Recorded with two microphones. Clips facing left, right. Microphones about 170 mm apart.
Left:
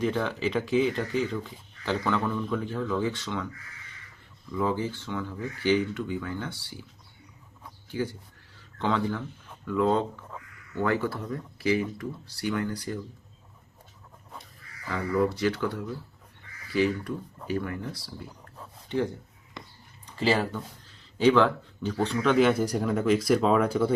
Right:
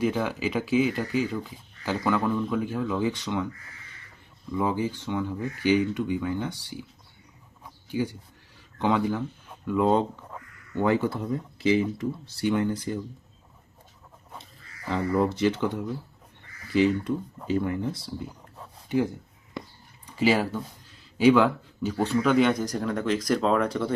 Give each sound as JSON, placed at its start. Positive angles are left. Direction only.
{"t": 0.0, "sound": "speech", "side_deg": -10}
{"t": 4.5, "sound": "speech", "side_deg": -15}
{"t": 7.9, "sound": "speech", "side_deg": -15}
{"t": 14.8, "sound": "speech", "side_deg": -25}
{"t": 18.9, "sound": "speech", "side_deg": -10}
{"t": 20.1, "sound": "speech", "side_deg": -10}